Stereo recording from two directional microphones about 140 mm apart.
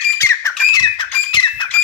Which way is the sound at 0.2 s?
20° left (ahead or behind).